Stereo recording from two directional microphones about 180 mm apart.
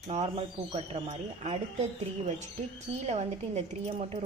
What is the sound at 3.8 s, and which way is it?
Speech, 35° right (ahead or behind).